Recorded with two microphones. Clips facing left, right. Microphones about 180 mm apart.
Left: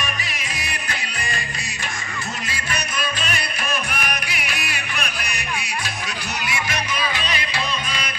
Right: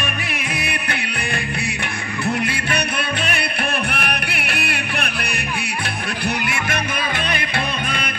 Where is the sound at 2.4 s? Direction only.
60° right (ahead or behind).